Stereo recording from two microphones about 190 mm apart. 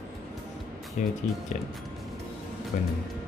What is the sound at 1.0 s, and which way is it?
Speech, 40° left (ahead or behind).